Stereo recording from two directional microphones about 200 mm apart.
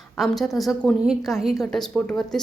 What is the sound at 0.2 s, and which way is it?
A woman's voice, centre (ahead or behind).